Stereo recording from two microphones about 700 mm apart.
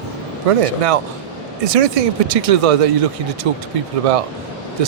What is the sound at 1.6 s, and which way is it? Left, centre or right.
Speech, right.